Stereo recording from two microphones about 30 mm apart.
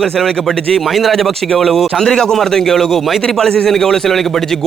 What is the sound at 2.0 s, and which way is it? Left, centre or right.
A man's voice, centre.